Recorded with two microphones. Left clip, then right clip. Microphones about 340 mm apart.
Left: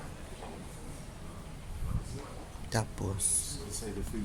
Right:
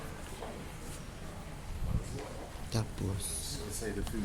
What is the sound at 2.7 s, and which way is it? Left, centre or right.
Speech, left.